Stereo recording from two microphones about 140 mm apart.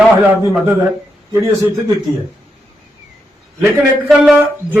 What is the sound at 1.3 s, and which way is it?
Speech, 20° right (ahead or behind).